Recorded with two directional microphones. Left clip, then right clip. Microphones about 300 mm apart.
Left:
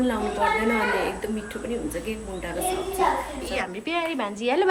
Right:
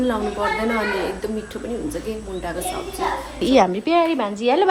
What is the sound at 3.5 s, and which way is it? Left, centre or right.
A woman's voice, centre.